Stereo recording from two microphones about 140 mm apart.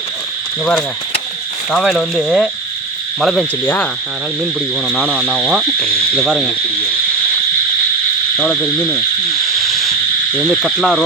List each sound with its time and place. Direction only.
0.6 s speech: 5° left (ahead or behind)
5.0 s speech: centre (ahead or behind)
8.4 s speech: 5° left (ahead or behind)
9.6 s a sound: centre (ahead or behind)
10.3 s speech: 5° left (ahead or behind)